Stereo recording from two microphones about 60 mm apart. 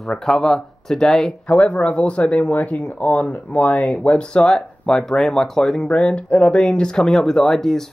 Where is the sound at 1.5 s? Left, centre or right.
Left.